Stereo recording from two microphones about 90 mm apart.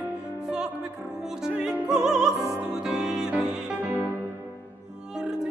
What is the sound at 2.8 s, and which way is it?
Music, 10° right (ahead or behind).